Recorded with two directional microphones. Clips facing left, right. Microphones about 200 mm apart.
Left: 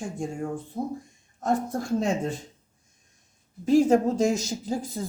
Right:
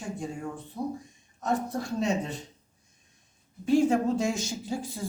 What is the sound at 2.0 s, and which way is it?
Speech, 50° left (ahead or behind).